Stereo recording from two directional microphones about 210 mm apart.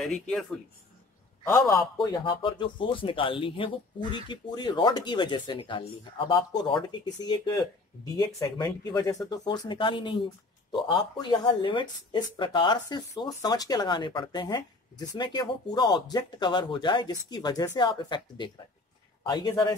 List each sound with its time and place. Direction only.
0.0 s speech: centre (ahead or behind)
1.7 s speech: 20° left (ahead or behind)